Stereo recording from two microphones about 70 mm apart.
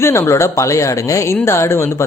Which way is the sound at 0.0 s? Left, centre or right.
Left.